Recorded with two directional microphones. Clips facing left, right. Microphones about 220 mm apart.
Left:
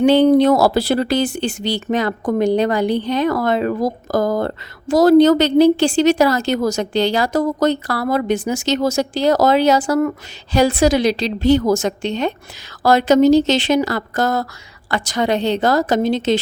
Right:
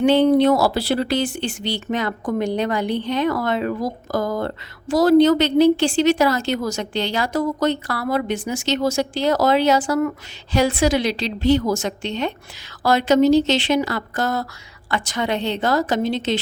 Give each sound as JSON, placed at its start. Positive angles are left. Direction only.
{"t": 0.0, "sound": "speech", "side_deg": 35}